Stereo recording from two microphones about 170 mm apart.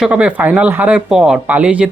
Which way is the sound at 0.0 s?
10° right (ahead or behind).